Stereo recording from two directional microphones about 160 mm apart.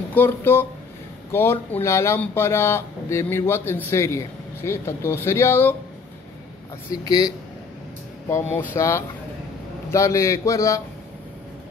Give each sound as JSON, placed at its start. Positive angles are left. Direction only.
{"t": 0.1, "sound": "speech", "side_deg": 15}
{"t": 6.9, "sound": "a man's voice", "side_deg": 20}